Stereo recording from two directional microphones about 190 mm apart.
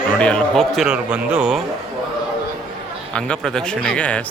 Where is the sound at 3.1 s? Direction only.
5° left (ahead or behind).